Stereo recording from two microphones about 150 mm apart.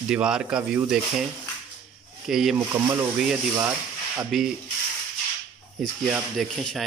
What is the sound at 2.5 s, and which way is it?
Speech, 15° right (ahead or behind).